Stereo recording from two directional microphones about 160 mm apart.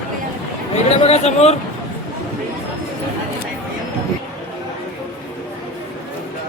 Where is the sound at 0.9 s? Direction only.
40° left (ahead or behind).